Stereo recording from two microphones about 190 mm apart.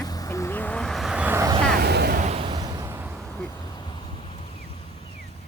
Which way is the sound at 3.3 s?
10° left (ahead or behind).